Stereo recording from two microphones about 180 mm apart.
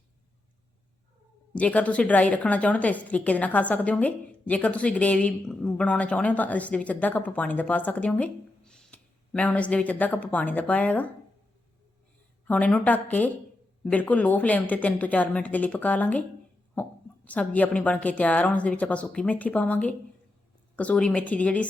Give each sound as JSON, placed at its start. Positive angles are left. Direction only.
{"t": 1.5, "sound": "a woman's voice", "side_deg": 5}
{"t": 12.5, "sound": "a woman's voice", "side_deg": 5}